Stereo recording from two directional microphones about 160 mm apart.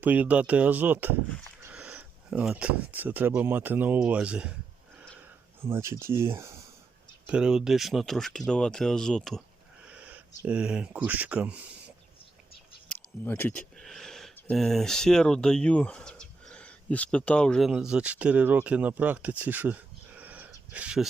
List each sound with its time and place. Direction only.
0.0 s speech: 10° right (ahead or behind)
5.6 s speech: 15° right (ahead or behind)
7.3 s speech: 5° right (ahead or behind)
9.8 s speech: 10° right (ahead or behind)
12.9 s a sound: 10° left (ahead or behind)
14.3 s speech: 5° left (ahead or behind)